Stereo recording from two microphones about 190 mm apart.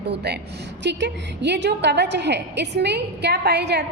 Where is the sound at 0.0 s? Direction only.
60° right (ahead or behind).